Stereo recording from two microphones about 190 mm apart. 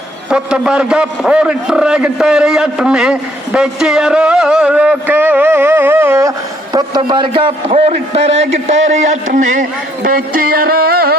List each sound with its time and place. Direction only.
0.3 s a man's voice: 5° right (ahead or behind); by 11.2 s 55° right (ahead or behind)